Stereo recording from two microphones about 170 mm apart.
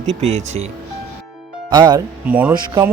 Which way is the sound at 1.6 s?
25° right (ahead or behind).